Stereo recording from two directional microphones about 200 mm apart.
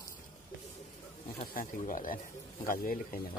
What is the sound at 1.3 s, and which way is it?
Speech, 40° left (ahead or behind).